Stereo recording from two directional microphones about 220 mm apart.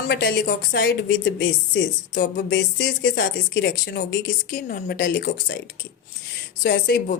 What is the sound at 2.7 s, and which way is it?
Speech, 55° left (ahead or behind).